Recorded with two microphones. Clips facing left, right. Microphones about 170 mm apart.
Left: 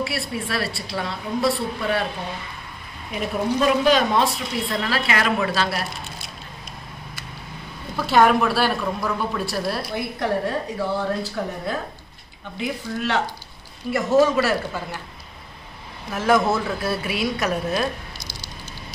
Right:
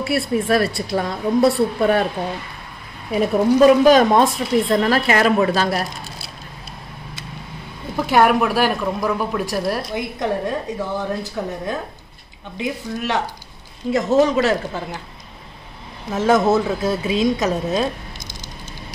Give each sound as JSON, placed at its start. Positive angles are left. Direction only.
{"t": 0.0, "sound": "speech", "side_deg": -45}
{"t": 3.6, "sound": "speech", "side_deg": -45}
{"t": 7.9, "sound": "a woman's voice", "side_deg": -10}
{"t": 16.1, "sound": "a woman's voice", "side_deg": -20}